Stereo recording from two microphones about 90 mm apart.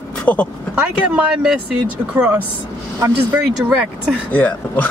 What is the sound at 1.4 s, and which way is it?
Speech, 10° right (ahead or behind).